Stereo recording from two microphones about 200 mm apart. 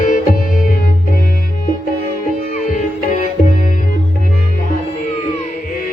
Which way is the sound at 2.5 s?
40° left (ahead or behind).